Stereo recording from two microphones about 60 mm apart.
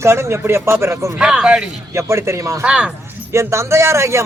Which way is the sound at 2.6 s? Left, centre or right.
Centre.